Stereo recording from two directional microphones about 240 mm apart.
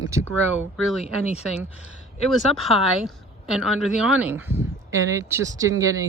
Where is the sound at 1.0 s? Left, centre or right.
Left.